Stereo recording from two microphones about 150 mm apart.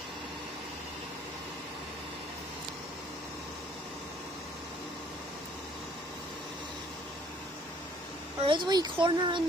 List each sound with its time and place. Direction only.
8.5 s speech: 30° right (ahead or behind)